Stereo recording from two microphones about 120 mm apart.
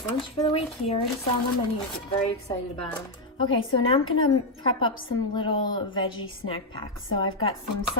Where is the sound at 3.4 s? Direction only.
45° left (ahead or behind).